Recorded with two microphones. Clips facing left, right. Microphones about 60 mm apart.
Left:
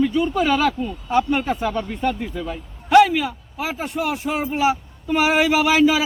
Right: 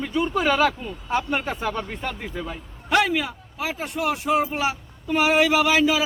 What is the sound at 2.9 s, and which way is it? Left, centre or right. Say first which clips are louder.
A man's voice: left 7 dB; centre.